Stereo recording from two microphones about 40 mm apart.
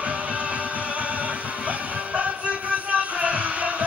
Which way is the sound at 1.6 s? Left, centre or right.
Right.